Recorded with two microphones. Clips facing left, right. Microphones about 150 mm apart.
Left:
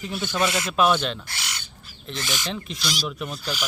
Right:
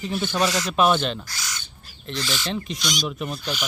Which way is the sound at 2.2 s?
20° left (ahead or behind).